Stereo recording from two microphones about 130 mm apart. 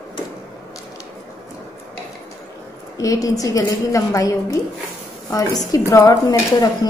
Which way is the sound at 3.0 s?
25° left (ahead or behind).